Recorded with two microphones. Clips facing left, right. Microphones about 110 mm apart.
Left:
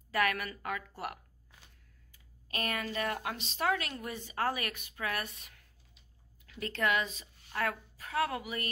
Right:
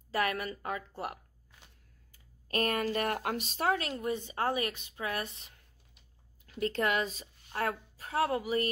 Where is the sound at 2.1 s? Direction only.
40° right (ahead or behind).